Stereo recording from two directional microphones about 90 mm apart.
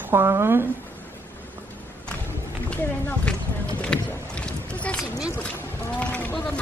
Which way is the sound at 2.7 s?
15° left (ahead or behind).